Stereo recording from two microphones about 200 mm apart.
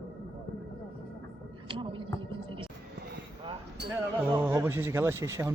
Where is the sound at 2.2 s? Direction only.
25° right (ahead or behind).